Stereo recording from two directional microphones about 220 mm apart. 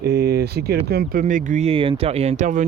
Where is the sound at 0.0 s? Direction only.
45° right (ahead or behind).